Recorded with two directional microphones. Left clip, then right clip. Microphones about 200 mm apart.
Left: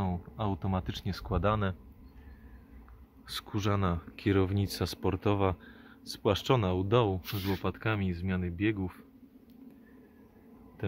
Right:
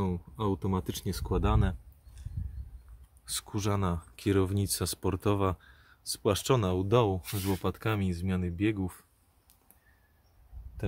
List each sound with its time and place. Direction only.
0.0 s speech: centre (ahead or behind)
3.3 s speech: 5° right (ahead or behind)
10.8 s a sound: 5° right (ahead or behind)